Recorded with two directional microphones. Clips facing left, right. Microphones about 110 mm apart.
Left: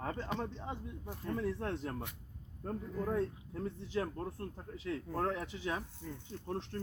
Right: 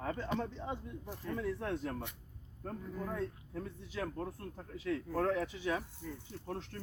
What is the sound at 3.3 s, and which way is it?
A man's voice, 25° left (ahead or behind).